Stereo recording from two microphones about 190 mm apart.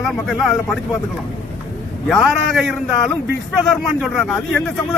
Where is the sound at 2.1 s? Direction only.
Centre (ahead or behind).